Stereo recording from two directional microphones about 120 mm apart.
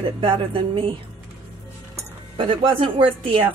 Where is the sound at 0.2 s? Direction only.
45° right (ahead or behind).